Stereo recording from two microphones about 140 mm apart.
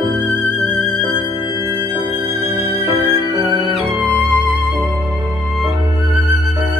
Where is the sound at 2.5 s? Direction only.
35° right (ahead or behind).